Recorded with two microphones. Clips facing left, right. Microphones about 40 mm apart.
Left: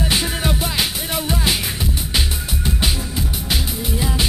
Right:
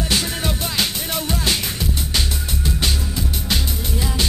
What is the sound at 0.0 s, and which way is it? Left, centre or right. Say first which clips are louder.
Music: left 1 dB; centre.